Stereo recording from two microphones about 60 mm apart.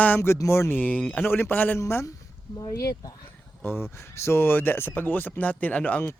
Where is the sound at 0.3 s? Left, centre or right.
Left.